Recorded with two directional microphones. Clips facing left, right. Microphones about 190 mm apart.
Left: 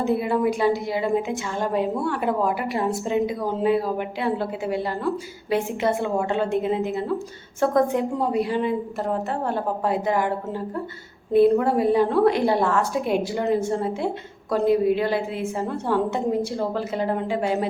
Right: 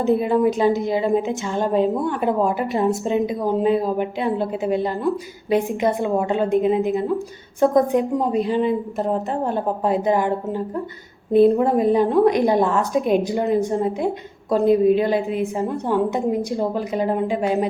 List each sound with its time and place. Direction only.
0.2 s a woman's voice: 20° right (ahead or behind)